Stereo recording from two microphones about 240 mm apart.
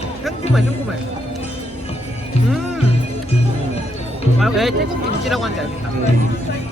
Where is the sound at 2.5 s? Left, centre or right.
Centre.